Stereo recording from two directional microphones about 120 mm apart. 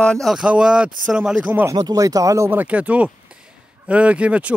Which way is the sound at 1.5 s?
15° right (ahead or behind).